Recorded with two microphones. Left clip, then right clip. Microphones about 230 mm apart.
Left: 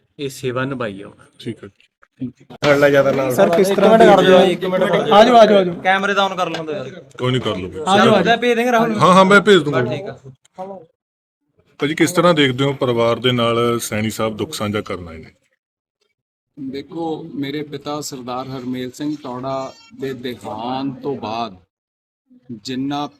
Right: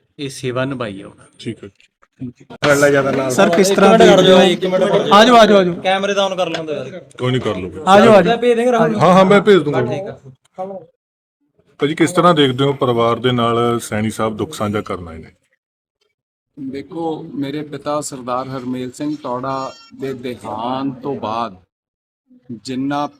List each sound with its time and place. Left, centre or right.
0.2 s speech: centre
2.8 s a man's voice: left
3.3 s a man's voice: right
3.9 s speech: centre
5.1 s a man's voice: right
5.8 s speech: centre
7.9 s a man's voice: right
8.2 s speech: centre
9.0 s speech: centre
9.9 s speech: centre
11.8 s a man's voice: centre
16.7 s speech: centre
22.6 s speech: centre